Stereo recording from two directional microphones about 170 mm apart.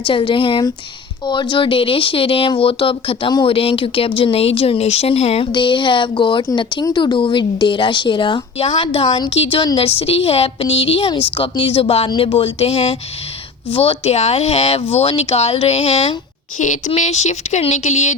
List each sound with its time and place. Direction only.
0.0 s speech: 30° left (ahead or behind)